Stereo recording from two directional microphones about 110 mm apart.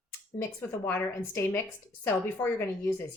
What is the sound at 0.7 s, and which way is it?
Speech, 20° left (ahead or behind).